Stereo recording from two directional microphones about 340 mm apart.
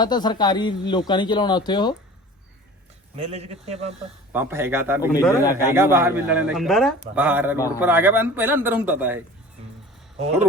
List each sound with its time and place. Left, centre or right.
0.0 s speech: centre
3.2 s speech: centre
4.3 s speech: centre
5.1 s speech: centre
5.7 s a man's voice: centre